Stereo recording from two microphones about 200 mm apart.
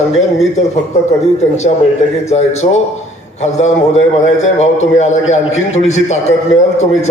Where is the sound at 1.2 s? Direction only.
35° left (ahead or behind).